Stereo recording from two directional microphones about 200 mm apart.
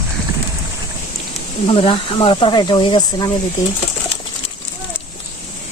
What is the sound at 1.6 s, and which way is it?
Speech, 25° left (ahead or behind).